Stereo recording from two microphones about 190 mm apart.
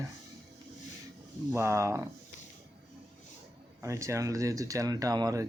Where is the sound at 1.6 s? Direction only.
15° right (ahead or behind).